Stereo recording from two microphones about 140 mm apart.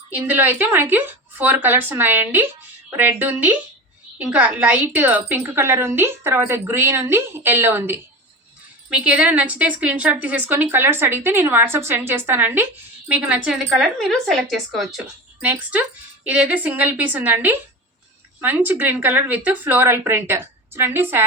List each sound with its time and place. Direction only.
0.1 s a woman's voice: 15° right (ahead or behind)